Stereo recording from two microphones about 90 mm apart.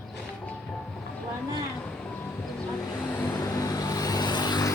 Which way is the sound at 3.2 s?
40° left (ahead or behind).